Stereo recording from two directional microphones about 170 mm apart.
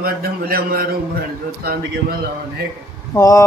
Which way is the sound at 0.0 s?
60° right (ahead or behind).